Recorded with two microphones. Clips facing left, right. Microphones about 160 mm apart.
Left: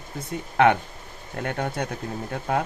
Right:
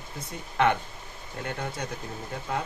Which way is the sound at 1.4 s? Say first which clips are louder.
Left 6 dB; 60° left (ahead or behind).